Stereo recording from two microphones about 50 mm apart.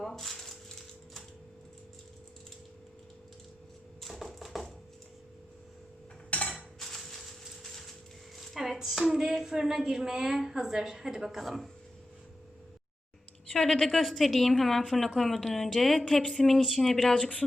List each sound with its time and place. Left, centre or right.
0.0 s rattle: centre
4.0 s a sound: centre
6.3 s dishes: left
6.7 s a sound: centre
8.4 s speech: centre
13.5 s a woman's voice: centre
17.2 s speech: left